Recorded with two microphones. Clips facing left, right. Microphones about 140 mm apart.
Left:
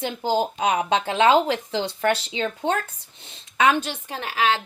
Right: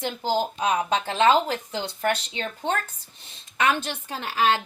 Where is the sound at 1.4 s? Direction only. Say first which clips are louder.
Left 4 dB; 90° left.